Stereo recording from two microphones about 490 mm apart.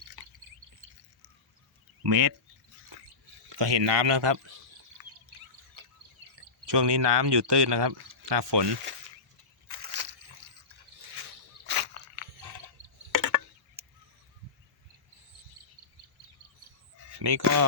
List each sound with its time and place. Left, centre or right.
0.2 s drip: right
2.0 s speech: right
3.5 s speech: right
5.0 s a sound: right
6.7 s speech: right
9.6 s crushing: right
11.6 s a sound: right
13.1 s chop: right
17.2 s speech: right